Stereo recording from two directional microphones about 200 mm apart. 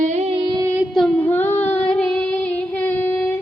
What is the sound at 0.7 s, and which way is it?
Female singing, centre (ahead or behind).